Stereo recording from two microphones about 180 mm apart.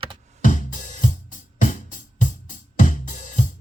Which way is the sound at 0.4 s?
45° left (ahead or behind).